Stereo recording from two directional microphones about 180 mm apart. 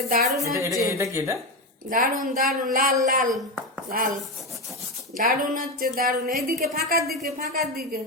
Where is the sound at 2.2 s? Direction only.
50° right (ahead or behind).